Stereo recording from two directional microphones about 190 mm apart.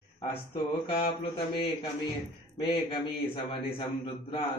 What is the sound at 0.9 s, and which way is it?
A man's voice, 30° left (ahead or behind).